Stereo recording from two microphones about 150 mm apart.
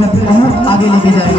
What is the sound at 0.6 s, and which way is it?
Speech, 35° left (ahead or behind).